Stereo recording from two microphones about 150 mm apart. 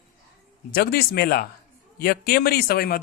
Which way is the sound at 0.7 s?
90° left.